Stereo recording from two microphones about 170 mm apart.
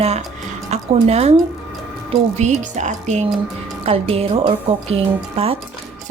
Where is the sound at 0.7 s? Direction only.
40° right (ahead or behind).